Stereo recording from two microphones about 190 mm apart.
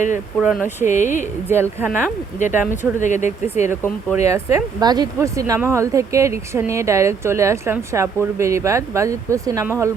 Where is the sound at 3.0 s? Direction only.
40° left (ahead or behind).